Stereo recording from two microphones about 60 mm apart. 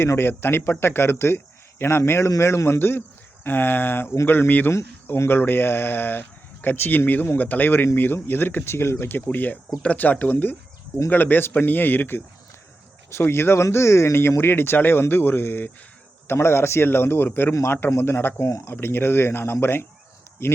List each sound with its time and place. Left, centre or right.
0.0 s speech: left
13.1 s speech: left
18.4 s speech: left